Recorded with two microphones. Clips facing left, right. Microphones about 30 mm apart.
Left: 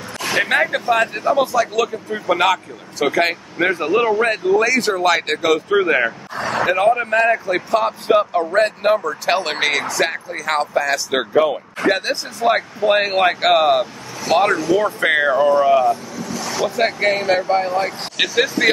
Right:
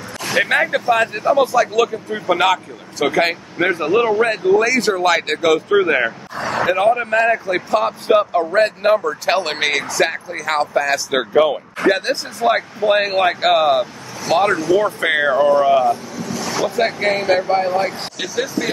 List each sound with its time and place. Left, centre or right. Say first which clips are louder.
0.4 s speech: right 1 dB; centre
18.1 s speech: left 4 dB; left